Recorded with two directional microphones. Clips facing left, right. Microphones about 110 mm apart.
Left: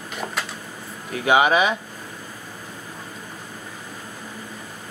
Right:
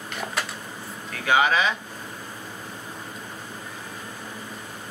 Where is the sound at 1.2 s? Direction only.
15° left (ahead or behind).